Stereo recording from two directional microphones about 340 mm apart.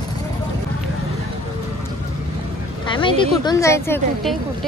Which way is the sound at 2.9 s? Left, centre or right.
Centre.